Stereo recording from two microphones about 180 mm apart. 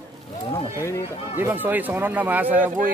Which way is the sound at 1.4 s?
10° right (ahead or behind).